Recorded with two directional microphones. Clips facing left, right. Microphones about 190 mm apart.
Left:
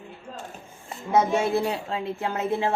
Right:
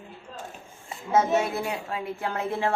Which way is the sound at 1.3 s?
30° left (ahead or behind).